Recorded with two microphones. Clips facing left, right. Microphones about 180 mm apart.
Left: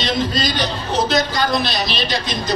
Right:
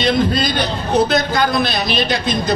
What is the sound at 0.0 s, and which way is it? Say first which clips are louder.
A man's voice: right 4 dB; 55° right (ahead or behind).